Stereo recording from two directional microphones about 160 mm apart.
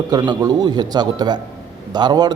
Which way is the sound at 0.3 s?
25° right (ahead or behind).